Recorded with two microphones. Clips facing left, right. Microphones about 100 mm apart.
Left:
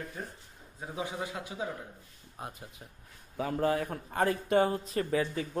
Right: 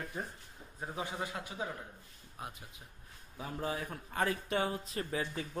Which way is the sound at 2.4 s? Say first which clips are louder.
Left 3 dB; 35° left (ahead or behind).